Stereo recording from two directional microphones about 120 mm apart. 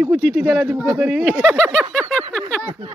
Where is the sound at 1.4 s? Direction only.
5° left (ahead or behind).